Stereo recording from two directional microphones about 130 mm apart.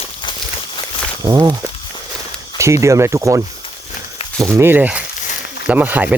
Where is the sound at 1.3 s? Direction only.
25° right (ahead or behind).